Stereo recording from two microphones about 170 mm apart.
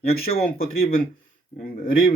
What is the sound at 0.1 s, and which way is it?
Speech, 60° left (ahead or behind).